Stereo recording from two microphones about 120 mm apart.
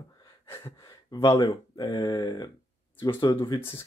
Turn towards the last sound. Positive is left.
turn(degrees=35)  # may be behind; listen again after turning